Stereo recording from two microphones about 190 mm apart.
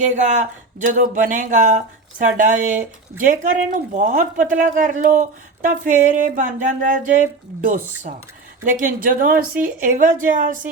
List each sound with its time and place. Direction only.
0.0 s speech: 40° right (ahead or behind)